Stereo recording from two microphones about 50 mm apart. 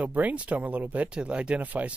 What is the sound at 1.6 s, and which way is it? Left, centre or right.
Speech, right.